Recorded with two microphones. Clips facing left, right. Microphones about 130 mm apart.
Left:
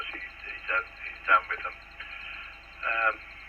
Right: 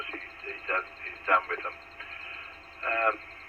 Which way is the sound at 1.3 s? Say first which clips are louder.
Even; 45° right (ahead or behind).